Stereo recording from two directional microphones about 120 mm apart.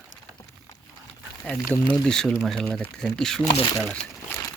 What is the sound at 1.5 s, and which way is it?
Speech, 20° left (ahead or behind).